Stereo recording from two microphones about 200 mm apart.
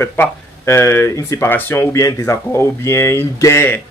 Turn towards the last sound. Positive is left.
turn(degrees=10)  # may be behind; listen again after turning